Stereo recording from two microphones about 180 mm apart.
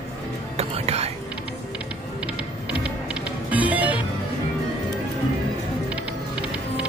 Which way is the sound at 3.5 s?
10° right (ahead or behind).